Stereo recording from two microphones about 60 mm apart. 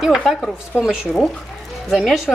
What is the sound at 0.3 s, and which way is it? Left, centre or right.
Speech, centre.